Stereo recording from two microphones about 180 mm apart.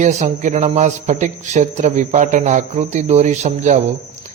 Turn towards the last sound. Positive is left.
turn(degrees=-40)  # may be behind; listen again after turning